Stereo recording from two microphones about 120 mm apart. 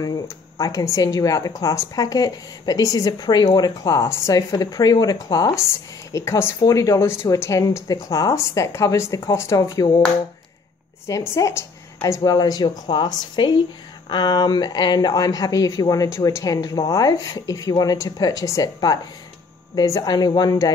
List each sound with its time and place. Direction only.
0.6 s a woman's voice: 30° left (ahead or behind)
11.1 s a woman's voice: 25° left (ahead or behind)